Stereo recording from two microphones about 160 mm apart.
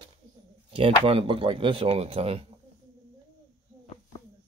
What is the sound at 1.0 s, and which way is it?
Speech, 35° right (ahead or behind).